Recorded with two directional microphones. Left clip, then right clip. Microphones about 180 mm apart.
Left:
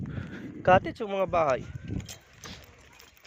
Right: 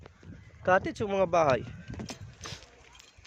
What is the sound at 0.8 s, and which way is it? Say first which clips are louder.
Speech: right 1 dB; 10° right (ahead or behind).